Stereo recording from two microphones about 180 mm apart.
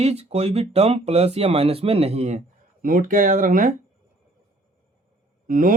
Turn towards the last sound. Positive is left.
turn(degrees=-50)  # may be behind; listen again after turning